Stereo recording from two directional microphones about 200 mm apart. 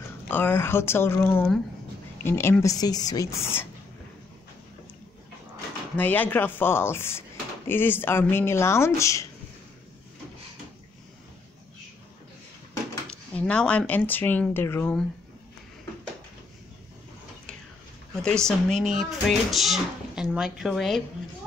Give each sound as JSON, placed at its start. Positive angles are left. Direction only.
{"t": 0.3, "sound": "speech", "side_deg": 10}
{"t": 5.9, "sound": "speech", "side_deg": 10}
{"t": 13.1, "sound": "speech", "side_deg": 5}
{"t": 18.2, "sound": "speech", "side_deg": 5}